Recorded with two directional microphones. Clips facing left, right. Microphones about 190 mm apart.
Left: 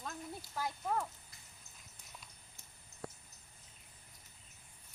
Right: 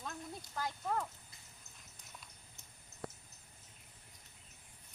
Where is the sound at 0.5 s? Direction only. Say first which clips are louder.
Left 1 dB; 5° left (ahead or behind).